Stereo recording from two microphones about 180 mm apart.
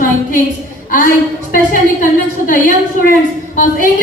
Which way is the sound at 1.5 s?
50° left (ahead or behind).